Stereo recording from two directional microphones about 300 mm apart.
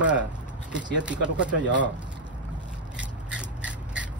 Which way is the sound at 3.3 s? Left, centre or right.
Centre.